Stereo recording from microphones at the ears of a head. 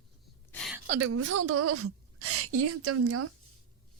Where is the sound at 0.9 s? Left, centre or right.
Right.